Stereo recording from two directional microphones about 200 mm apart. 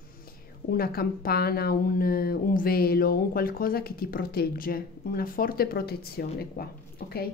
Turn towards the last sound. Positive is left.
turn(degrees=50)  # may be behind; listen again after turning